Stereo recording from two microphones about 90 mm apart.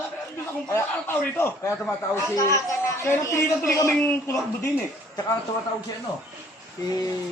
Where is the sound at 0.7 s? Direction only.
25° left (ahead or behind).